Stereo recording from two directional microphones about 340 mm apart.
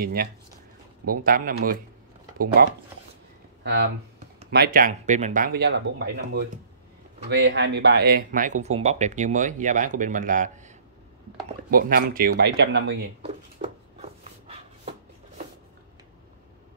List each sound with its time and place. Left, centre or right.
0.0 s speech: right
11.7 s speech: right
13.2 s a sound: centre